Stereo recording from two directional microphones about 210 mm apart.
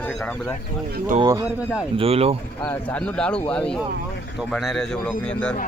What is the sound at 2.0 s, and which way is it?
Speech, 30° right (ahead or behind).